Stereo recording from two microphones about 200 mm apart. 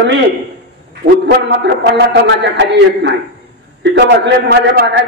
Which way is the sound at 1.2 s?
60° right (ahead or behind).